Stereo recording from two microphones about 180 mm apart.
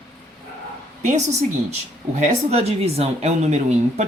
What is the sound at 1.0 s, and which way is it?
A woman's voice, 40° right (ahead or behind).